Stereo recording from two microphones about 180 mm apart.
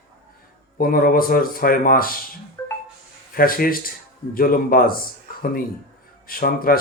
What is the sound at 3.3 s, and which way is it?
Speech, 55° left (ahead or behind).